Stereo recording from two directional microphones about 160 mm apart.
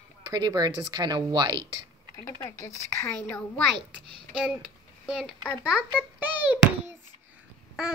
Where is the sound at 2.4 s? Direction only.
20° left (ahead or behind).